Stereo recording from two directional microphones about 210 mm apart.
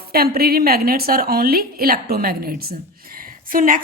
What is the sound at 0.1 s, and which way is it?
A woman's voice, 45° right (ahead or behind).